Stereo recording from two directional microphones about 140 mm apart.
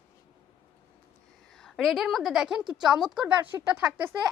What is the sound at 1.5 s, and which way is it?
A woman's voice, 5° left (ahead or behind).